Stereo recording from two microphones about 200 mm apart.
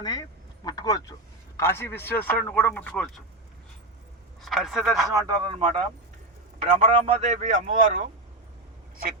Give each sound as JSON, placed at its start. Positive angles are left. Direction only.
{"t": 0.0, "sound": "speech", "side_deg": 20}
{"t": 4.4, "sound": "a man's voice", "side_deg": 0}
{"t": 5.3, "sound": "speech", "side_deg": -25}